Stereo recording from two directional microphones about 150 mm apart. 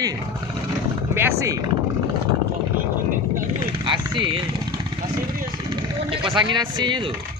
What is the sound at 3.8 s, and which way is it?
Vehicle, 30° right (ahead or behind).